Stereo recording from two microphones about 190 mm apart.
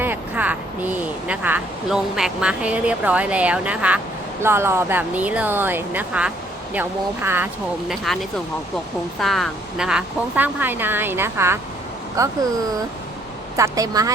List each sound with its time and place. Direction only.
0.0 s speech: 10° right (ahead or behind)
7.9 s speech: centre (ahead or behind); by 12.3 s 15° right (ahead or behind)
13.6 s a woman's voice: 20° right (ahead or behind)